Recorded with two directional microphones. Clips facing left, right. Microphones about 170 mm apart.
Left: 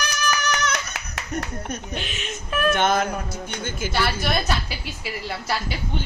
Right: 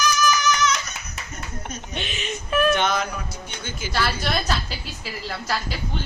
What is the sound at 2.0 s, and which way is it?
Speech, centre (ahead or behind).